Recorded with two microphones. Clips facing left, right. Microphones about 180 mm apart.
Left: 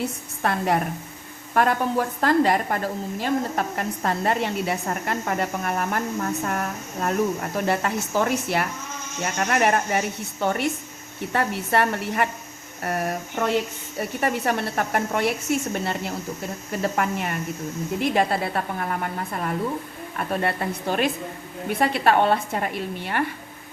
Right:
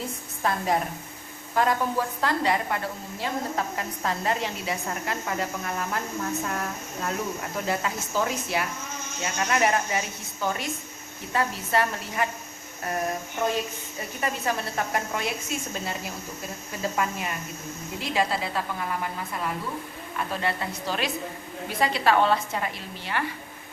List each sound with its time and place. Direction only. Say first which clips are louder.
0.0 s a sound: left 3 dB; 65° left (ahead or behind)
1.5 s a woman's voice: left 3 dB; 60° left (ahead or behind)
6.4 s a woman's voice: left 3 dB; 50° left (ahead or behind)
12.8 s a sound: left 3 dB; 65° left (ahead or behind)
14.0 s a woman's voice: left 5 dB; 60° left (ahead or behind)
20.3 s a woman's voice: left 6 dB; 55° left (ahead or behind)